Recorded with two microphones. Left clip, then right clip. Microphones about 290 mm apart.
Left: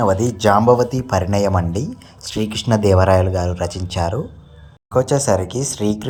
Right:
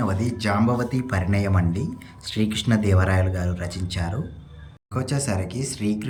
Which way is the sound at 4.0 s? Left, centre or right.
Left.